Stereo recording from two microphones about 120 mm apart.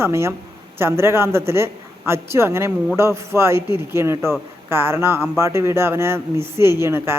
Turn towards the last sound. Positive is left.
turn(degrees=-20)  # may be behind; listen again after turning